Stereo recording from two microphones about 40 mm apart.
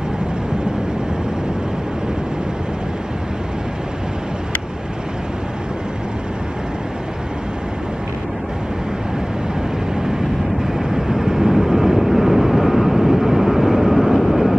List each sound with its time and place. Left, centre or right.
10.6 s vehicle: centre